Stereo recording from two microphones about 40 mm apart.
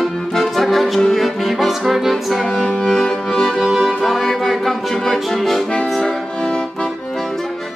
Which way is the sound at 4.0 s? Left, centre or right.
Centre.